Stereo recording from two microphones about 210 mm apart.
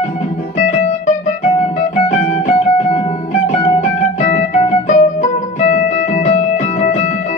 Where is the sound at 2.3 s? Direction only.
30° left (ahead or behind).